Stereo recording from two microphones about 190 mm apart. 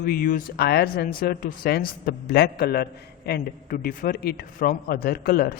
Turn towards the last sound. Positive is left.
turn(degrees=50)  # may be behind; listen again after turning